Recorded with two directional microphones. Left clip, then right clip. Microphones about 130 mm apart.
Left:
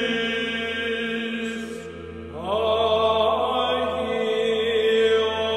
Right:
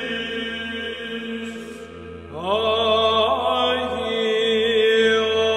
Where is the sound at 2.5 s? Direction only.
45° right (ahead or behind).